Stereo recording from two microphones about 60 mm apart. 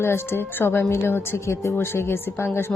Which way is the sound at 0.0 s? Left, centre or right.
Left.